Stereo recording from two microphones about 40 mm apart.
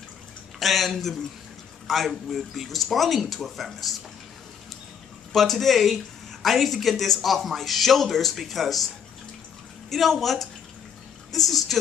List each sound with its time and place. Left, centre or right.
0.6 s speech: centre
5.3 s speech: centre